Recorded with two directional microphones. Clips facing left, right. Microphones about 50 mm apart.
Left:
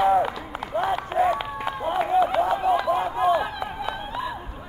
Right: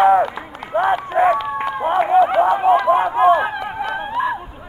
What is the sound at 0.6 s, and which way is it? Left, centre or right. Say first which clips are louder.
Run: right 6 dB; centre.